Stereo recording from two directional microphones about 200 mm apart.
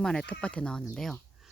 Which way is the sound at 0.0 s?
5° left (ahead or behind).